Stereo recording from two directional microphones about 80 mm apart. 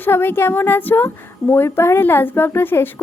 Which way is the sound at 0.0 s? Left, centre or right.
Left.